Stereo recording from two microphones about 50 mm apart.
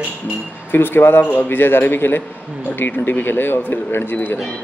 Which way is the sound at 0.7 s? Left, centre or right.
Left.